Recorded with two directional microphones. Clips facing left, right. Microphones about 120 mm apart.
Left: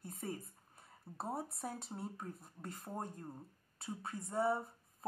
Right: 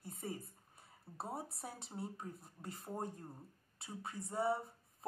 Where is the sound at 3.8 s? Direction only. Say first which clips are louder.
Left 2 dB; 40° left (ahead or behind).